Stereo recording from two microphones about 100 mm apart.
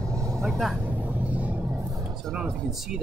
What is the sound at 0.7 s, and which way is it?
Vehicle, 15° right (ahead or behind).